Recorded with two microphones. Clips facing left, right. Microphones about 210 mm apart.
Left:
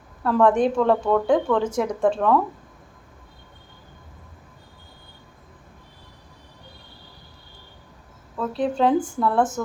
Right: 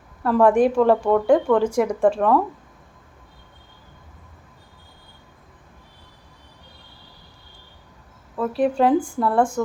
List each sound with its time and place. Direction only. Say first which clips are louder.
0.2 s a woman's voice: right 2 dB; 5° right (ahead or behind)
8.4 s a woman's voice: right 3 dB; 5° right (ahead or behind)
9.0 s speech: right 1 dB; 5° left (ahead or behind)
9.2 s a woman's voice: right 1 dB; 5° right (ahead or behind)